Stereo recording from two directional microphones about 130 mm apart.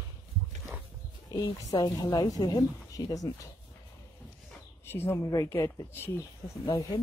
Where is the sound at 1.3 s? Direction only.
25° left (ahead or behind).